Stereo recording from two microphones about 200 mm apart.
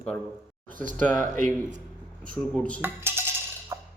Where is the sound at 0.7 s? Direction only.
40° right (ahead or behind).